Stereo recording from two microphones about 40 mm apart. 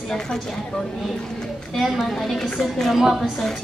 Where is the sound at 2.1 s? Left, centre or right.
Centre.